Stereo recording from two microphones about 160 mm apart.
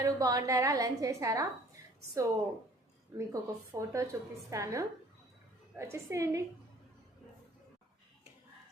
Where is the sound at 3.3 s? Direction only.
20° right (ahead or behind).